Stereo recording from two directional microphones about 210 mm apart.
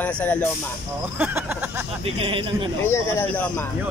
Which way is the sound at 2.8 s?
10° left (ahead or behind).